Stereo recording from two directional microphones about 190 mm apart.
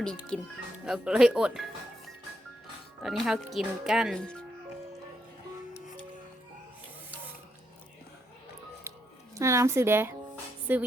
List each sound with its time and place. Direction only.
0.3 s speech: 5° left (ahead or behind)
3.0 s speech: centre (ahead or behind)
9.3 s speech: 15° right (ahead or behind)